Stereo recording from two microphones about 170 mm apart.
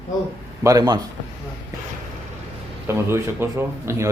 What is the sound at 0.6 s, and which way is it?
Speech, 20° right (ahead or behind).